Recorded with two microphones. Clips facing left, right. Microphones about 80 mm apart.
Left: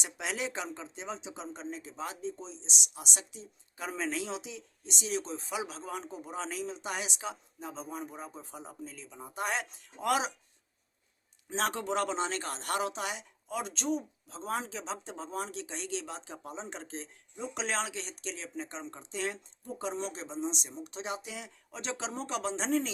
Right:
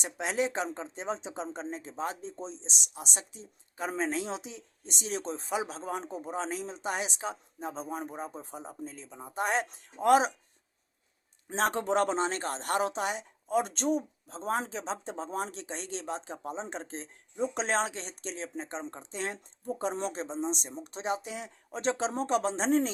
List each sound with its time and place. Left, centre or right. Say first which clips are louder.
0.0 s speech: right 5 dB; right
11.4 s speech: right 4 dB; right